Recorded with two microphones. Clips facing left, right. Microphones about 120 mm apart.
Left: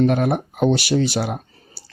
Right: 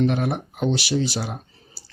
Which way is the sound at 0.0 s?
50° left (ahead or behind).